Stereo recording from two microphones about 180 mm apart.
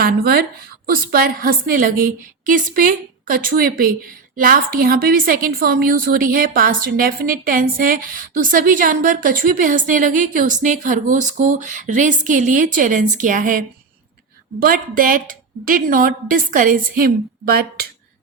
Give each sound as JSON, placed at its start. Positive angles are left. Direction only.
{"t": 0.0, "sound": "a woman's voice", "side_deg": -60}